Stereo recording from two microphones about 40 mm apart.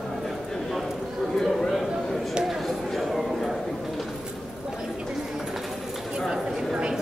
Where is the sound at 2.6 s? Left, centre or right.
Centre.